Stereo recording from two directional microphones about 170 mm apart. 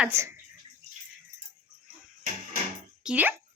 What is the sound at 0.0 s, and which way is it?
Speech, 15° right (ahead or behind).